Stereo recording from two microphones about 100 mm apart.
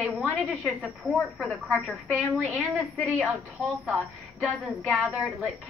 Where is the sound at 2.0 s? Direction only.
15° right (ahead or behind).